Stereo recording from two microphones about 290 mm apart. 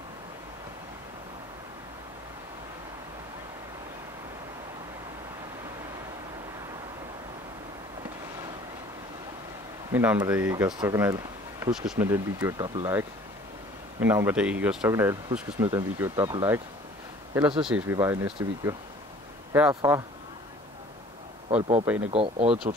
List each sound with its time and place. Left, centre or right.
9.9 s speech: centre
21.5 s speech: right